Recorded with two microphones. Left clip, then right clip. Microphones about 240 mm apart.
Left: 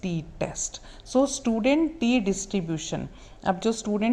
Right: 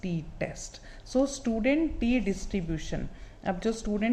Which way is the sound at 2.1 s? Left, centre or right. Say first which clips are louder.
Left 4 dB; centre.